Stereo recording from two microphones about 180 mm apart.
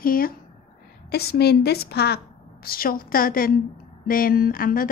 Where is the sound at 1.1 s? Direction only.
65° left (ahead or behind).